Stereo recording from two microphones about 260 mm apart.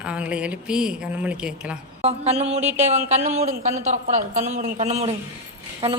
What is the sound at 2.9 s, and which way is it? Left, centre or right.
A woman's voice, right.